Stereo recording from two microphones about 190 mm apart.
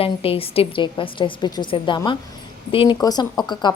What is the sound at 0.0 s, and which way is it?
A woman's voice, 30° left (ahead or behind).